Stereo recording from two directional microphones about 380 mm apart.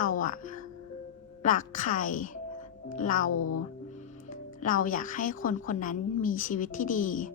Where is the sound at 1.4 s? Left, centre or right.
Centre.